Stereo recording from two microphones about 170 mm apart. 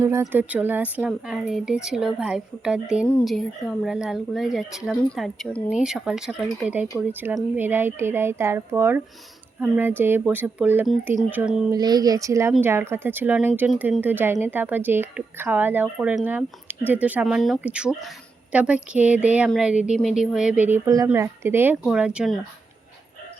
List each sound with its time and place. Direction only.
0.0 s a woman's voice: 15° right (ahead or behind)
11.7 s a woman's voice: 25° right (ahead or behind); by 22.4 s 5° right (ahead or behind)